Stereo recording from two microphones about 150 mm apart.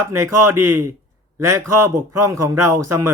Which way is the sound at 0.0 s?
20° right (ahead or behind).